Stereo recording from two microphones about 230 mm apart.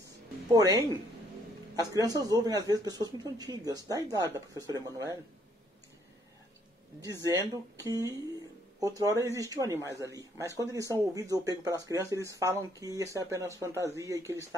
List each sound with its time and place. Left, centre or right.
0.5 s speech: centre
7.3 s speech: centre